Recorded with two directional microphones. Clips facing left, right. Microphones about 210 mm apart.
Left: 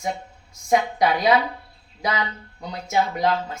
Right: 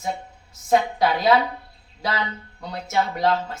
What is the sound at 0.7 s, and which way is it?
Speech, 15° left (ahead or behind).